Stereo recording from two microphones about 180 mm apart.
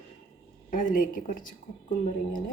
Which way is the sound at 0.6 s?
45° left (ahead or behind).